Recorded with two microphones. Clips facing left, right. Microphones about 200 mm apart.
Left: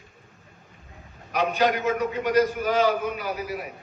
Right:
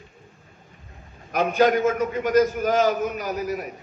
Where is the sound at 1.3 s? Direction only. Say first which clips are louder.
Right 4 dB; 45° right (ahead or behind).